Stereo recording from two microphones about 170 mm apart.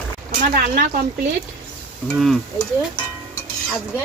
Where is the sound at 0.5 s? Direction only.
55° right (ahead or behind).